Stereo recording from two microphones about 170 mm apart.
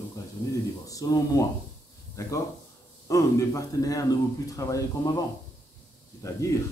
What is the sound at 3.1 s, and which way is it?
A man's voice, 20° left (ahead or behind).